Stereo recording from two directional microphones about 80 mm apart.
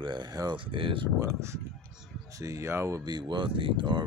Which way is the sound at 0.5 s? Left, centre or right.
Right.